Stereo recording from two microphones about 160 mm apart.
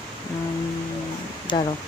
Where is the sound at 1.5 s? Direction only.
30° left (ahead or behind).